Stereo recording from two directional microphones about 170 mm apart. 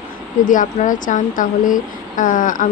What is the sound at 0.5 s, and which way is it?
Speech, 50° left (ahead or behind).